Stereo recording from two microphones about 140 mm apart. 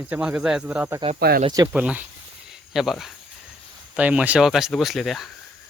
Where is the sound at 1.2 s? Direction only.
90° right.